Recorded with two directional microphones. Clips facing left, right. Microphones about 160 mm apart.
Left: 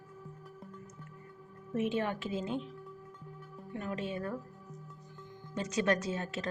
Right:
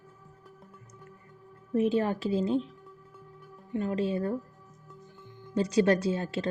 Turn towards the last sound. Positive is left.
turn(degrees=-30)  # may be behind; listen again after turning